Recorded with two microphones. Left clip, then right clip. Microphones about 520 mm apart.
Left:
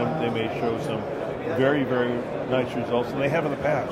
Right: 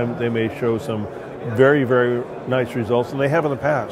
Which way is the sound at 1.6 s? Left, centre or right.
Right.